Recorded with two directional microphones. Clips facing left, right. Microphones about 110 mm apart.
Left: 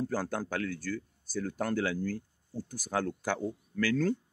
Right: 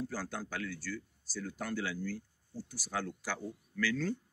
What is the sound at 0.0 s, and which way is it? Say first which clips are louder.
A man's voice: left 6 dB; 50° left (ahead or behind).